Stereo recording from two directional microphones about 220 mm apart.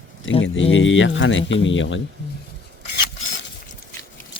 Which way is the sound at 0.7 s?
60° left (ahead or behind).